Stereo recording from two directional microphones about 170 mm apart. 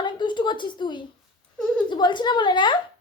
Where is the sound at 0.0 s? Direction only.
25° left (ahead or behind).